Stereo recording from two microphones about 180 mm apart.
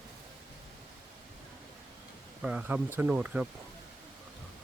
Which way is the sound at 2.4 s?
5° right (ahead or behind).